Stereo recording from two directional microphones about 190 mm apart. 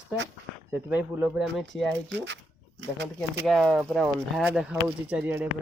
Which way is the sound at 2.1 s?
65° right (ahead or behind).